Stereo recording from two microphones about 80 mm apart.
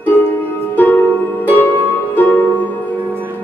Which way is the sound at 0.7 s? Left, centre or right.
Left.